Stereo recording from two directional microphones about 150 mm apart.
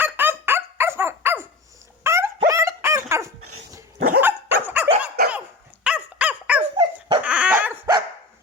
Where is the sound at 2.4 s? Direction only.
20° right (ahead or behind).